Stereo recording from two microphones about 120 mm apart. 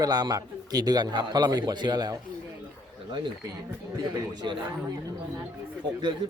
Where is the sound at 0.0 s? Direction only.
35° right (ahead or behind).